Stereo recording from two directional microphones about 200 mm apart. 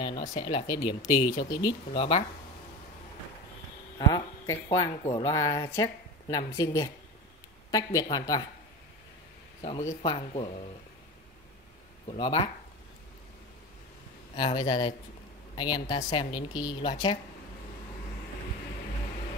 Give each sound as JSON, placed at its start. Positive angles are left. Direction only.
{"t": 0.4, "sound": "a woman's voice", "side_deg": 20}
{"t": 4.0, "sound": "a woman's voice", "side_deg": 20}
{"t": 9.6, "sound": "a woman's voice", "side_deg": 30}
{"t": 12.1, "sound": "a woman's voice", "side_deg": 25}
{"t": 14.3, "sound": "a woman's voice", "side_deg": 20}